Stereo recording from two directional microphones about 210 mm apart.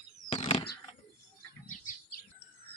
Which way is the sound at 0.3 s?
25° left (ahead or behind).